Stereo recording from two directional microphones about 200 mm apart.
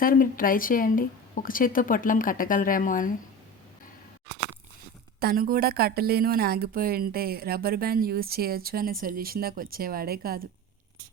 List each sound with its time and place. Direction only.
0.0 s speech: 45° left (ahead or behind)
5.2 s speech: 45° right (ahead or behind)